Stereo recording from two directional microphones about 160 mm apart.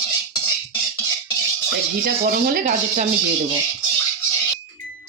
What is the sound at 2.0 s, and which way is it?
Speech, 65° right (ahead or behind).